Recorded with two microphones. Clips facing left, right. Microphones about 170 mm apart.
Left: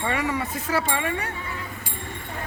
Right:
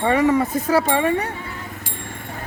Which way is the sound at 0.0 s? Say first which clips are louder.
Right 9 dB; 40° right (ahead or behind).